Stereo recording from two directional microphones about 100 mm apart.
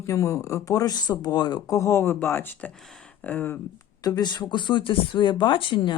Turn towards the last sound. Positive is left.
turn(degrees=55)  # may be behind; listen again after turning